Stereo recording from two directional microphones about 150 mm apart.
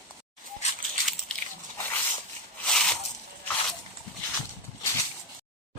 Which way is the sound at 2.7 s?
5° left (ahead or behind).